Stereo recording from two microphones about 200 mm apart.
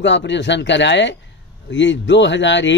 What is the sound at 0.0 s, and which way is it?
A man's voice, 65° left (ahead or behind).